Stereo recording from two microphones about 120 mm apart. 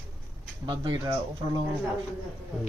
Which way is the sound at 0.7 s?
40° right (ahead or behind).